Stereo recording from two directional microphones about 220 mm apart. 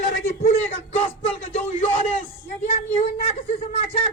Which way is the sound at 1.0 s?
25° left (ahead or behind).